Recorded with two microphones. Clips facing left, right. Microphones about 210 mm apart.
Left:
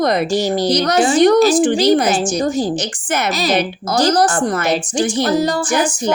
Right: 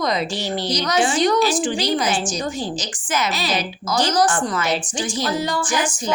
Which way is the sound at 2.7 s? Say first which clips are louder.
Left 5 dB; 60° left (ahead or behind).